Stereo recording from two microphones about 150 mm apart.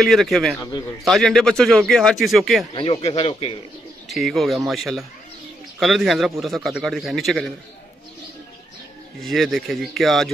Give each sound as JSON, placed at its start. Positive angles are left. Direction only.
{"t": 0.0, "sound": "a man's voice", "side_deg": 0}
{"t": 0.6, "sound": "a man's voice", "side_deg": 25}
{"t": 1.0, "sound": "a man's voice", "side_deg": 5}
{"t": 2.7, "sound": "speech", "side_deg": 35}
{"t": 4.1, "sound": "a man's voice", "side_deg": 0}
{"t": 9.2, "sound": "a man's voice", "side_deg": 0}